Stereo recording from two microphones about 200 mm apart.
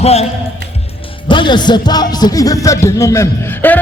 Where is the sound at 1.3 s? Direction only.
25° left (ahead or behind).